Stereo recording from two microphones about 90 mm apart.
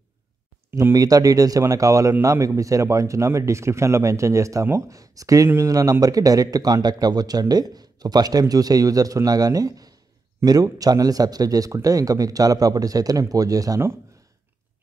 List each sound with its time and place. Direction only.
0.7 s speech: 25° right (ahead or behind)
0.9 s speech: 45° right (ahead or behind)